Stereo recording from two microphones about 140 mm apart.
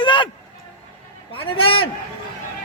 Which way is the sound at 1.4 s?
40° left (ahead or behind).